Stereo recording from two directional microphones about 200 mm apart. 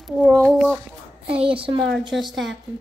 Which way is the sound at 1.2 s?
25° right (ahead or behind).